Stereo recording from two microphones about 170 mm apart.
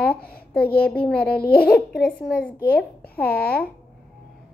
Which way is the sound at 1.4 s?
65° left (ahead or behind).